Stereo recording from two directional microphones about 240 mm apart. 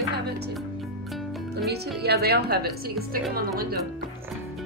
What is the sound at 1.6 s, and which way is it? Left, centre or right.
A woman's voice, right.